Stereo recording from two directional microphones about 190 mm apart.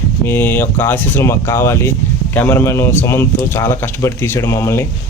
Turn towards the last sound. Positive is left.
turn(degrees=15)  # may be behind; listen again after turning